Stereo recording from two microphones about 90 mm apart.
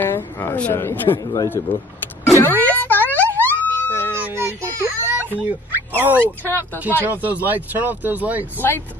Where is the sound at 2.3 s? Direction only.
25° left (ahead or behind).